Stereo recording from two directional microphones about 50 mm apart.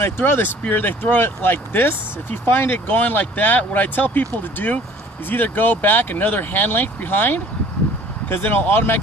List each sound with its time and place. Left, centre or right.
0.0 s speech: left
2.7 s speech: left